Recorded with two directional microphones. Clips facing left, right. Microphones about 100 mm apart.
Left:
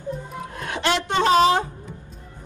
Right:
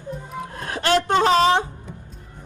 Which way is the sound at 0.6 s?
40° right (ahead or behind).